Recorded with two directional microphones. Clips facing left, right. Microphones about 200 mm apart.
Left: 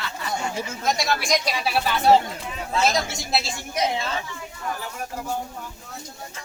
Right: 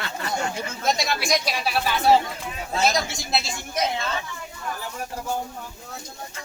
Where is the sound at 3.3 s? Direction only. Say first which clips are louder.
Left 1 dB; 10° left (ahead or behind).